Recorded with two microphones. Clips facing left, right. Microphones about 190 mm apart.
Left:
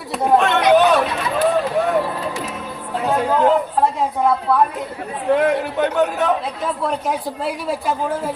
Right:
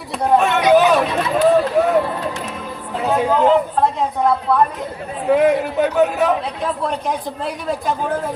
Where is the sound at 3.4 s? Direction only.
5° left (ahead or behind).